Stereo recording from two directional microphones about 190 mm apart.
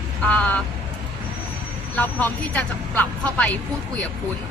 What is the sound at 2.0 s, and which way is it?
Speech, 10° left (ahead or behind).